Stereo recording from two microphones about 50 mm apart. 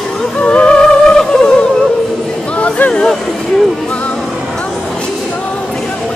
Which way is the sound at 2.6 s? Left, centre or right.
Left.